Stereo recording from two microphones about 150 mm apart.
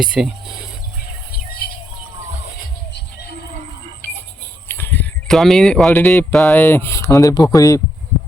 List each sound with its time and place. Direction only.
0.0 s speech: 5° right (ahead or behind)
1.3 s music: 80° left
4.0 s a sound: 15° left (ahead or behind)
5.4 s speech: centre (ahead or behind)
5.9 s speech: 15° left (ahead or behind)